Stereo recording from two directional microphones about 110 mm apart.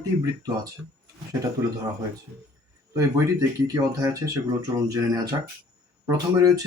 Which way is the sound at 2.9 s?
30° right (ahead or behind).